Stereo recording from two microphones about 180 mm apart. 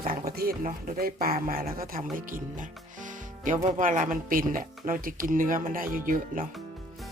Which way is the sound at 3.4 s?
45° right (ahead or behind).